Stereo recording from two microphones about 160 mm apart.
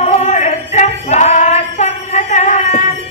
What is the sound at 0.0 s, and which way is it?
Female singing, 45° left (ahead or behind).